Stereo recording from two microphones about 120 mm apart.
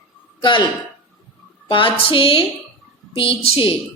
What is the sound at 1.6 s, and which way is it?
A woman's voice, 45° left (ahead or behind).